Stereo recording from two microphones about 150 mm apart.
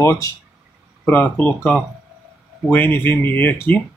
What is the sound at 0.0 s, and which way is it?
Speech, 20° left (ahead or behind).